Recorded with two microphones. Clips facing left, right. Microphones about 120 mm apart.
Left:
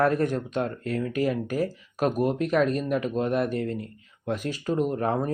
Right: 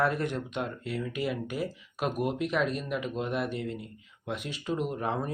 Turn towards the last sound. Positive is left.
turn(degrees=45)  # may be behind; listen again after turning